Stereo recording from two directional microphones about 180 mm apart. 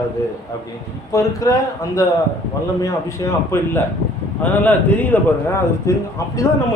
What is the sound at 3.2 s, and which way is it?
Speech, 20° left (ahead or behind).